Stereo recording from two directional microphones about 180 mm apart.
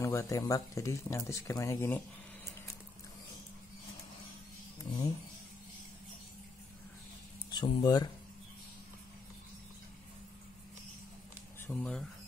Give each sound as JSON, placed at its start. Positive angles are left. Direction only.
{"t": 0.0, "sound": "speech", "side_deg": 15}
{"t": 4.9, "sound": "speech", "side_deg": 30}
{"t": 7.5, "sound": "speech", "side_deg": 25}
{"t": 11.6, "sound": "speech", "side_deg": 5}